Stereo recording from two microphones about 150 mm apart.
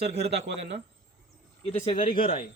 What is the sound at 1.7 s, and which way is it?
Speech, 45° left (ahead or behind).